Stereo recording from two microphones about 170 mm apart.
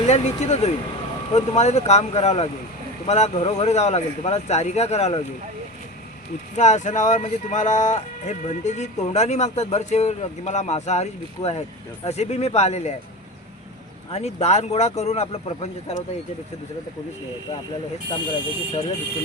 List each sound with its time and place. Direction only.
0.1 s speech: 40° left (ahead or behind)
6.6 s speech: 45° left (ahead or behind)
14.1 s speech: 40° left (ahead or behind)
18.1 s speech: 30° left (ahead or behind)